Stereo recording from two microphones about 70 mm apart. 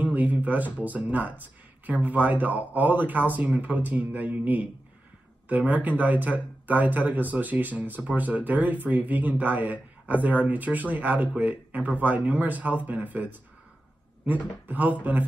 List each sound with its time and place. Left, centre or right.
0.0 s a sound: right
0.7 s speech: right
14.7 s speech: right